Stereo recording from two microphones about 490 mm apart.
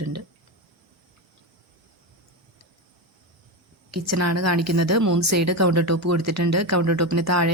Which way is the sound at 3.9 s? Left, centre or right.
Right.